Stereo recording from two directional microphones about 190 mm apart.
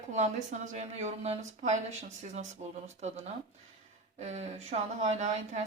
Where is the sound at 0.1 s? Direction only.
40° right (ahead or behind).